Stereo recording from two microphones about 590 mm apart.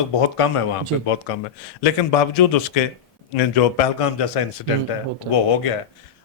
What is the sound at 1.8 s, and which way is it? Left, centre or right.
A man's voice, left.